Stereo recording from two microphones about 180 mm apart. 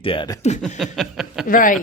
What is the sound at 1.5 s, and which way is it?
Speech, 50° left (ahead or behind).